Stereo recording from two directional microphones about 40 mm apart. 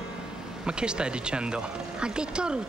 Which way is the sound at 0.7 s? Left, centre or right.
Right.